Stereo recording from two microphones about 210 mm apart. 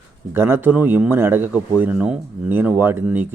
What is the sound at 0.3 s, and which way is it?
Speech, 10° right (ahead or behind).